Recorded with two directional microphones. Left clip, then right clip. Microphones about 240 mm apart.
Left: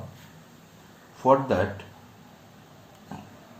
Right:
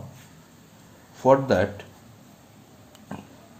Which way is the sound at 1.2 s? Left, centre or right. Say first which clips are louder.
Right 2 dB; right.